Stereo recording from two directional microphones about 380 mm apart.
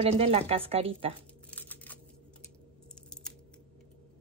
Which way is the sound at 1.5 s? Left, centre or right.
Centre.